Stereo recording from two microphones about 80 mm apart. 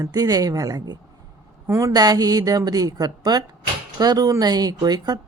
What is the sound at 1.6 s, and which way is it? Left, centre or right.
Speech, right.